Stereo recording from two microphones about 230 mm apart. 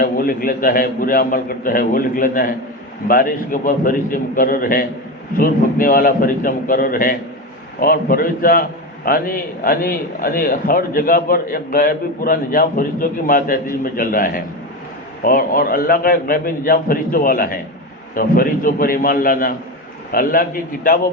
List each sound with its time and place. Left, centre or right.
0.0 s a man's voice: left